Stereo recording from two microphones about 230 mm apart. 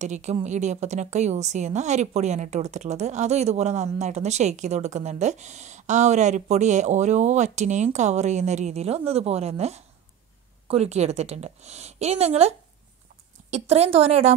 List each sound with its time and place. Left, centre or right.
0.0 s a woman's voice: right